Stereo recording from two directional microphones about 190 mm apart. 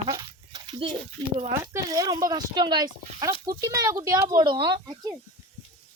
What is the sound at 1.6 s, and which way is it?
Speech, 15° right (ahead or behind).